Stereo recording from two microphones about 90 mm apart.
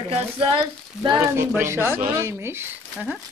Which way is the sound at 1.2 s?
30° right (ahead or behind).